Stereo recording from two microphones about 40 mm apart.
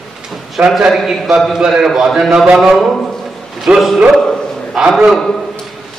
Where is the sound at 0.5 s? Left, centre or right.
Centre.